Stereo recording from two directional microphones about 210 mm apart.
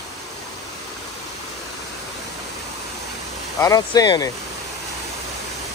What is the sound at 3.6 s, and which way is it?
Speech, 15° left (ahead or behind).